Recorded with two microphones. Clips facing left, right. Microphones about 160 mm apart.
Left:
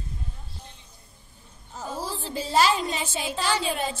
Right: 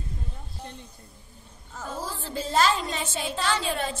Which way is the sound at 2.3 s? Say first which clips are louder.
Left 1 dB; 10° left (ahead or behind).